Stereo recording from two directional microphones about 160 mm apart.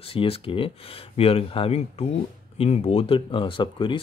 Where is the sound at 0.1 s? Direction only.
35° left (ahead or behind).